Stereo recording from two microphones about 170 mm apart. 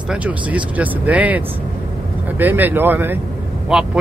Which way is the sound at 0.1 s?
10° right (ahead or behind).